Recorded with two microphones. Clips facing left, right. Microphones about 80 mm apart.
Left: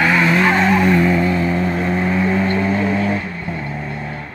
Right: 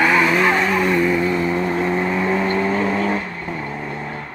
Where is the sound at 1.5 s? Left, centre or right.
Centre.